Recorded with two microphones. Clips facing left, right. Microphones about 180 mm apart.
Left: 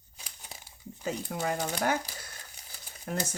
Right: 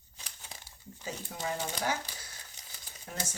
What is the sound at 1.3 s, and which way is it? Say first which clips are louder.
Speech: left 6 dB; 65° left (ahead or behind).